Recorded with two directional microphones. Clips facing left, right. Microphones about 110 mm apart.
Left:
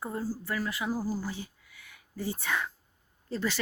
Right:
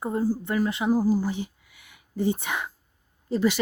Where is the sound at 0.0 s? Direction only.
20° right (ahead or behind).